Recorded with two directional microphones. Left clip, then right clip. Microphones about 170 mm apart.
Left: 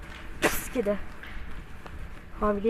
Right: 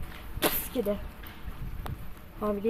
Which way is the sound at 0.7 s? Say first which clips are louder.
Left 2 dB; 5° left (ahead or behind).